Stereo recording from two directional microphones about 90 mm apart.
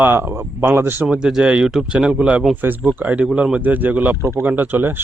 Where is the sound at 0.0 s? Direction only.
25° right (ahead or behind).